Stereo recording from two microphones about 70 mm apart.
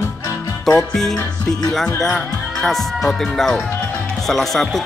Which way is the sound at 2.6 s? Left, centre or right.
Centre.